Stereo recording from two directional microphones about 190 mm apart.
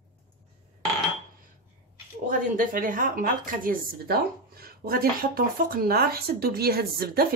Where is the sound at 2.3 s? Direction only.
45° right (ahead or behind).